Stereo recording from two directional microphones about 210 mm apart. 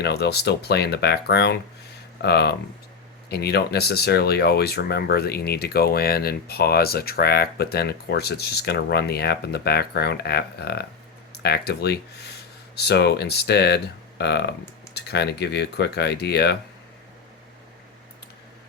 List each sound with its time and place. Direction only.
0.0 s speech: 50° left (ahead or behind)